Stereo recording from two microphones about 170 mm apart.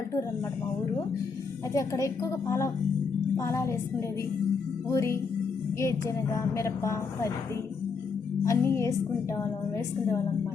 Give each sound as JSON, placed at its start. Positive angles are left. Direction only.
{"t": 1.7, "sound": "speech", "side_deg": 20}
{"t": 4.9, "sound": "speech", "side_deg": 15}
{"t": 8.4, "sound": "speech", "side_deg": 15}